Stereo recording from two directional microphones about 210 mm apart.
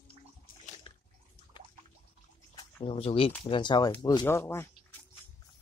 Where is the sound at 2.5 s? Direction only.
20° left (ahead or behind).